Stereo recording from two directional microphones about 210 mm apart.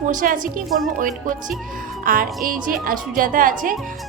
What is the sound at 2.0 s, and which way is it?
A woman's voice, 40° right (ahead or behind).